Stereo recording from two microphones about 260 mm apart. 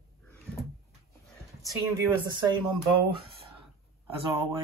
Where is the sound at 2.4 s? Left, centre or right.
Centre.